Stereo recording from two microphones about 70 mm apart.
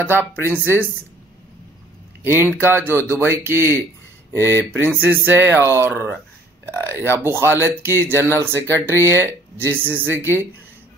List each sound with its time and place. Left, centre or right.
0.0 s speech: right
2.2 s speech: right